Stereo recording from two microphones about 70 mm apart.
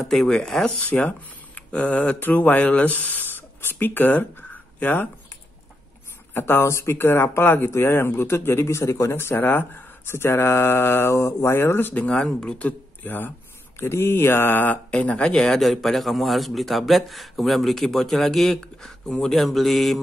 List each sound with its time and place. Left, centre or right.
0.0 s speech: centre
0.7 s speech: left
6.3 s speech: left
11.9 s speech: centre
13.7 s speech: left; by 20.0 s centre